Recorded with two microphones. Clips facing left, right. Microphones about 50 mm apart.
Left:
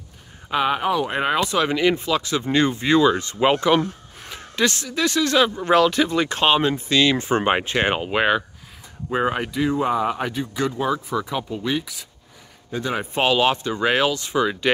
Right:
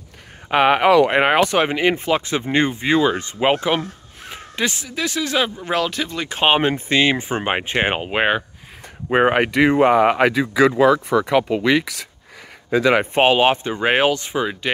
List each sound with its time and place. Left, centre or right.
0.5 s speech: right
0.8 s speech: right
1.1 s speech: right
1.7 s speech: right
2.7 s speech: centre
6.4 s speech: right
7.2 s speech: centre
9.1 s speech: right
10.8 s speech: right
13.0 s speech: right
14.3 s speech: centre